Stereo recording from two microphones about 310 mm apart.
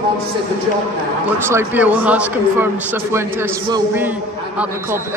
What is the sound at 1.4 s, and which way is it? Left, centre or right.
A man's voice, centre.